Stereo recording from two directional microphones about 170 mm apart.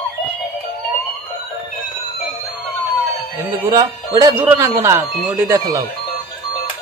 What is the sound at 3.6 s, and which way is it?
Speech, 20° right (ahead or behind).